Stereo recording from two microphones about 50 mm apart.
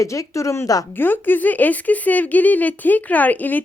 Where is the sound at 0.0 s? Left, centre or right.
Left.